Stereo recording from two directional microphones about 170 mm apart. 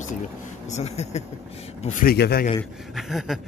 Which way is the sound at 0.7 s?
40° left (ahead or behind).